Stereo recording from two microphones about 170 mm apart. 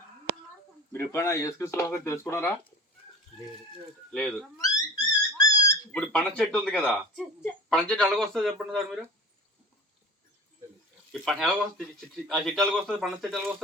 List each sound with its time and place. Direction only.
0.9 s speech: 15° left (ahead or behind)
4.1 s speech: 5° left (ahead or behind)
4.5 s dog: 20° left (ahead or behind)
5.9 s speech: 5° left (ahead or behind)
11.1 s speech: centre (ahead or behind)